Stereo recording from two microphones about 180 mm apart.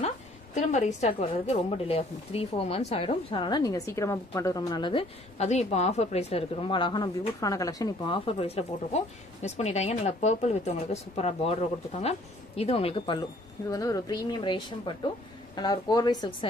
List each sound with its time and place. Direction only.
0.6 s a woman's voice: 40° left (ahead or behind)
5.4 s a woman's voice: 35° left (ahead or behind)